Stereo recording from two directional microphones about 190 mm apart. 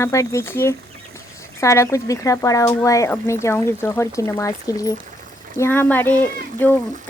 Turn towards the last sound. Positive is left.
turn(degrees=10)  # may be behind; listen again after turning